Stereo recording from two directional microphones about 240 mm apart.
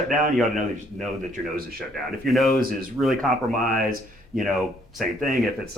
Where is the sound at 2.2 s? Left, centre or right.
Centre.